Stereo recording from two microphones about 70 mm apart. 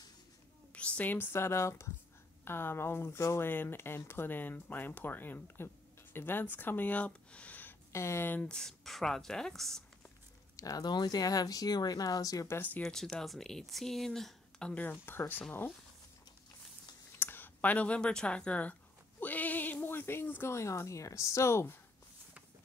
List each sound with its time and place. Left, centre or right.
0.7 s speech: centre
7.1 s a sound: centre
7.9 s speech: left
8.4 s speech: centre
10.5 s speech: left
10.9 s speech: left
12.4 s speech: left
12.8 s speech: centre
14.7 s speech: left
17.2 s speech: left